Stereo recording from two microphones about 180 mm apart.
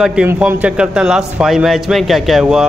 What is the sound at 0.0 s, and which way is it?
Speech, 5° right (ahead or behind).